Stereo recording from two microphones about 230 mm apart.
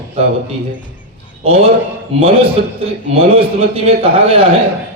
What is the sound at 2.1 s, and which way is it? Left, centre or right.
Speech, right.